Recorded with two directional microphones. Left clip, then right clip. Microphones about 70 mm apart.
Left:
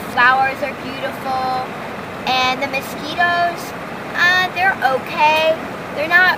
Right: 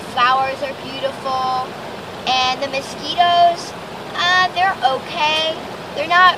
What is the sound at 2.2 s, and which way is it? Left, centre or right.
Music, right.